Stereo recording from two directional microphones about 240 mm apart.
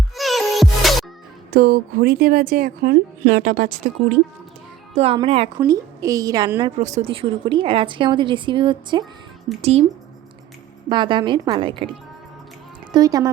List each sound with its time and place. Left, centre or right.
0.2 s music: centre
1.5 s a woman's voice: right
4.9 s a woman's voice: right
6.7 s a woman's voice: right
10.8 s a woman's voice: centre
12.9 s a woman's voice: centre